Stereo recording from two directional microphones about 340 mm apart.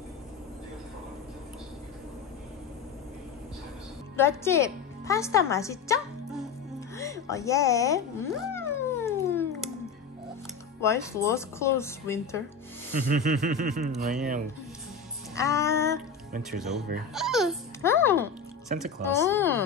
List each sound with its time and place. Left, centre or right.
4.2 s a woman's voice: centre
8.4 s cat: centre
10.8 s speech: centre
13.1 s a sound: right
15.3 s a child's voice: centre